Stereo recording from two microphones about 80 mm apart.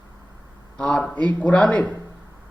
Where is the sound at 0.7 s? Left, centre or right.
Centre.